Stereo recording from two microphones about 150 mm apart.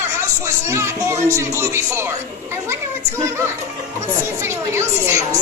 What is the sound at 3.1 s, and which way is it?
Speech, 15° right (ahead or behind).